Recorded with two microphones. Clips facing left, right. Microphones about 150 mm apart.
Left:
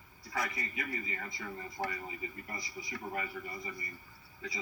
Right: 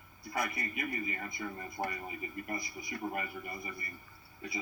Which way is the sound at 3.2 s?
60° right (ahead or behind).